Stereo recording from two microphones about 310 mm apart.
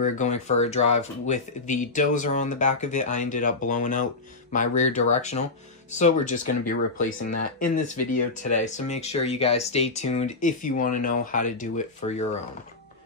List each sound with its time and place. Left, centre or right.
0.0 s speech: left